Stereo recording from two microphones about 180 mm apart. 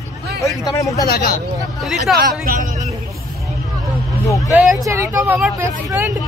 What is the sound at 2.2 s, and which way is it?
Speech, 55° right (ahead or behind).